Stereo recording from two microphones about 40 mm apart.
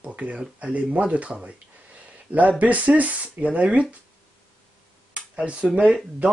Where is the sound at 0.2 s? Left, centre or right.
Right.